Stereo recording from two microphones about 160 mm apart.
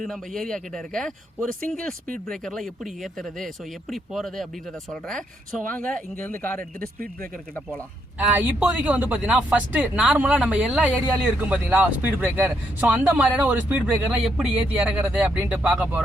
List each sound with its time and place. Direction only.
0.0 s speech: centre (ahead or behind)
2.0 s speech: 60° right (ahead or behind)
2.3 s speech: centre (ahead or behind)
8.4 s speech: 10° right (ahead or behind)